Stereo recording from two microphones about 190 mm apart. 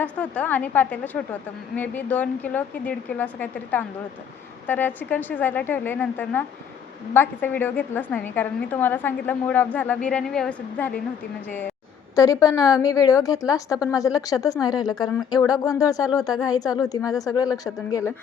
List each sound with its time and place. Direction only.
0.0 s a woman's voice: 10° left (ahead or behind)